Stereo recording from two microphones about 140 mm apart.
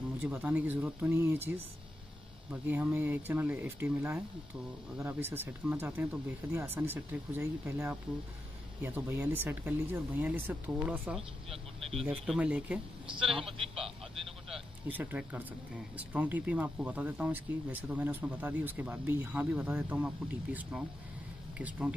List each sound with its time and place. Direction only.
0.2 s speech: 10° right (ahead or behind)
11.1 s speech: 45° right (ahead or behind)
12.3 s speech: 5° right (ahead or behind)
13.4 s speech: 40° right (ahead or behind)
14.5 s vehicle: 10° right (ahead or behind)
16.0 s speech: 10° right (ahead or behind)